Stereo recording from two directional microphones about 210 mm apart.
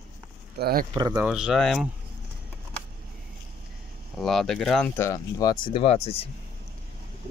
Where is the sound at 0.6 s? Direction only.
45° right (ahead or behind).